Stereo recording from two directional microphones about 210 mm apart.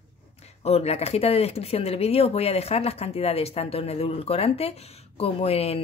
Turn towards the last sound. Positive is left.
turn(degrees=30)  # may be behind; listen again after turning